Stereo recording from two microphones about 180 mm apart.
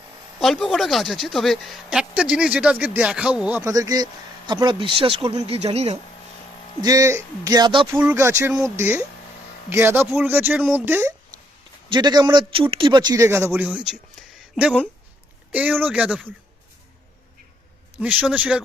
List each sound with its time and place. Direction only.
0.3 s speech: centre (ahead or behind); by 6.0 s 35° right (ahead or behind)
6.8 s a man's voice: 20° right (ahead or behind)
7.9 s speech: 10° right (ahead or behind)
11.9 s speech: 25° right (ahead or behind); by 16.2 s 5° right (ahead or behind)
18.0 s speech: 10° right (ahead or behind)